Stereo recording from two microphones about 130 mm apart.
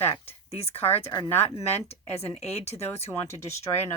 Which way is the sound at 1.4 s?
55° left (ahead or behind).